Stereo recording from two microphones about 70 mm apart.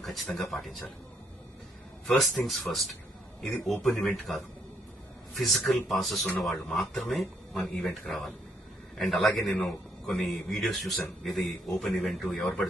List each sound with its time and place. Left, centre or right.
0.0 s a man's voice: centre
2.0 s a man's voice: centre
12.4 s speech: centre